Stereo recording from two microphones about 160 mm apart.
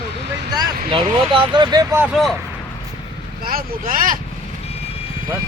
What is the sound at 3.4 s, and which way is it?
Speech, 65° right (ahead or behind).